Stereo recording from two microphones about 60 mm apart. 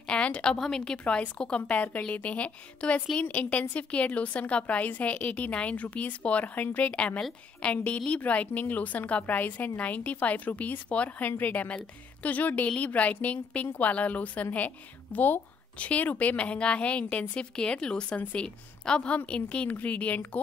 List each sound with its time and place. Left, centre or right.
0.1 s a woman's voice: centre